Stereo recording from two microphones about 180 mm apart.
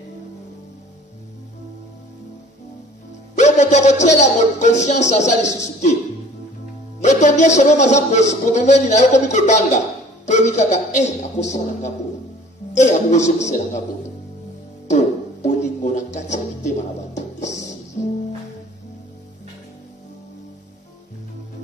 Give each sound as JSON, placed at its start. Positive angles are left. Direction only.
{"t": 3.3, "sound": "a man's voice", "side_deg": 40}
{"t": 7.0, "sound": "a man's voice", "side_deg": 40}
{"t": 14.9, "sound": "music", "side_deg": 40}